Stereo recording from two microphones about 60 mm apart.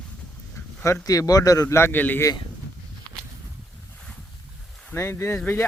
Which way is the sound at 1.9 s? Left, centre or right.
Left.